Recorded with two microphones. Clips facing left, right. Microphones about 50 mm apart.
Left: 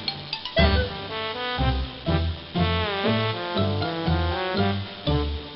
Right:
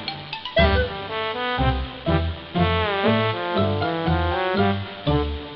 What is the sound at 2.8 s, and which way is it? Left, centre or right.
Music, centre.